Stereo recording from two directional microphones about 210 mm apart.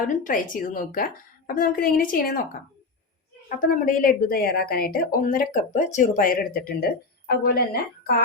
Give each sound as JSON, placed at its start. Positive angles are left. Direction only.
{"t": 0.1, "sound": "a woman's voice", "side_deg": 40}
{"t": 3.7, "sound": "a woman's voice", "side_deg": 40}